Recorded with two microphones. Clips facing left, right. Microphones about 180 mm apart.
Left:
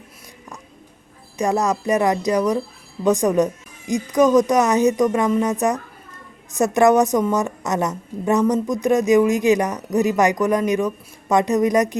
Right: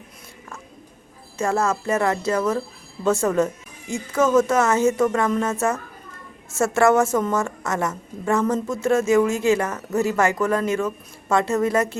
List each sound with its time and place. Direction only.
1.4 s a woman's voice: 15° left (ahead or behind)